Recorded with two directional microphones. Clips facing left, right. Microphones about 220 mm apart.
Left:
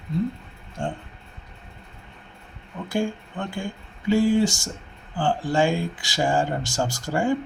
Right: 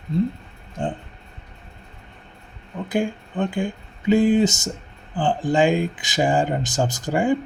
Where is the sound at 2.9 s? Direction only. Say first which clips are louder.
Right 2 dB; 15° right (ahead or behind).